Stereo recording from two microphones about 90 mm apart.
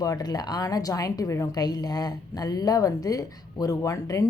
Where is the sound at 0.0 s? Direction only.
45° left (ahead or behind).